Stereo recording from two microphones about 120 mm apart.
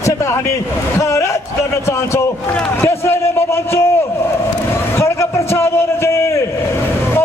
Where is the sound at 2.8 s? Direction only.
20° left (ahead or behind).